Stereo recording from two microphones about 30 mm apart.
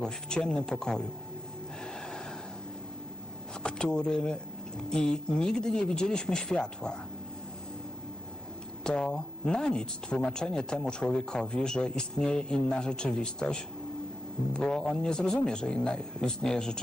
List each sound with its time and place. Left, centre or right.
0.0 s speech: left
1.8 s gasp: left
3.6 s speech: left
8.8 s speech: left
14.6 s speech: centre